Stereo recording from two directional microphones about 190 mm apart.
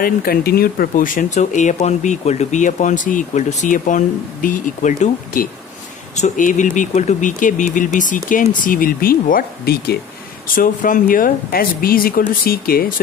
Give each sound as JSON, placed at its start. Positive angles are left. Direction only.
{"t": 0.0, "sound": "speech", "side_deg": 50}